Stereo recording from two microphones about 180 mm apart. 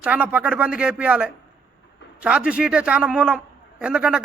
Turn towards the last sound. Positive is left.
turn(degrees=-5)  # may be behind; listen again after turning